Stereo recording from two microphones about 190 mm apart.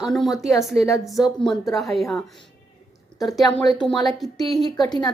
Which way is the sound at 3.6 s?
20° left (ahead or behind).